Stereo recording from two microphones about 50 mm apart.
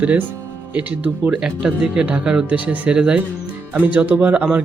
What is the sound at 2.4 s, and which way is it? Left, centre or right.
Speech, right.